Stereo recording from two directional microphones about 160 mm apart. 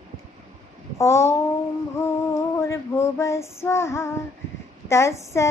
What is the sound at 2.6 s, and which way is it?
Female singing, 15° left (ahead or behind).